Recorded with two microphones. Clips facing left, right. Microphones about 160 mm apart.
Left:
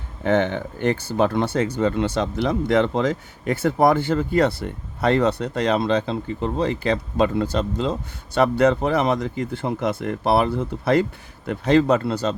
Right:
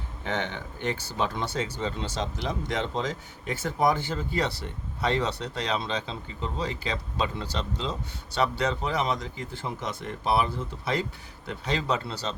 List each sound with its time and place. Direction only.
0.3 s speech: 50° left (ahead or behind)